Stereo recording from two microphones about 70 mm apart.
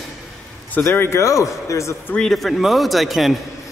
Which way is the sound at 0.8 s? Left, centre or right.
Left.